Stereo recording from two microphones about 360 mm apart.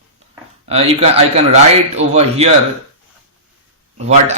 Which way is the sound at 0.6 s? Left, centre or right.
Centre.